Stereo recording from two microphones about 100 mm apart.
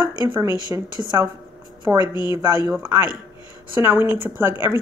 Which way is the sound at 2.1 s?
45° left (ahead or behind).